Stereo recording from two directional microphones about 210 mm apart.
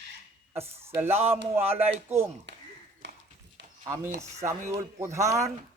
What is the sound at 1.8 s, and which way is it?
Speech, 30° right (ahead or behind).